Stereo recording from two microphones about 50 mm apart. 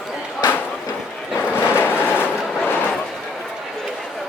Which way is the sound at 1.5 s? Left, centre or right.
Left.